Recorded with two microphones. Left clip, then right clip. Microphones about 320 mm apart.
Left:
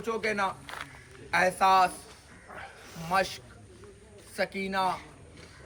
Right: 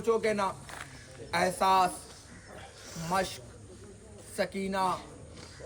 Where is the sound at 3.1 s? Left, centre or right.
Centre.